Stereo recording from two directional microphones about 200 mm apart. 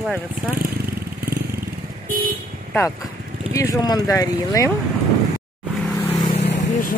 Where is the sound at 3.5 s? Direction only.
15° left (ahead or behind).